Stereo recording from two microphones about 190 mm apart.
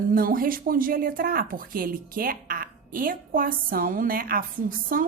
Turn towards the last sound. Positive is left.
turn(degrees=-45)  # may be behind; listen again after turning